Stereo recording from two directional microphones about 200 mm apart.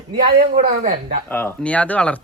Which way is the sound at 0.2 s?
45° right (ahead or behind).